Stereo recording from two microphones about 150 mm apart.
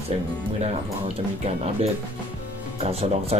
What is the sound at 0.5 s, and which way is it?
Speech, 45° right (ahead or behind).